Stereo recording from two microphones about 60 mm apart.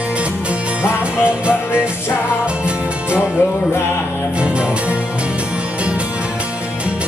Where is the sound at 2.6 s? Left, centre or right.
Centre.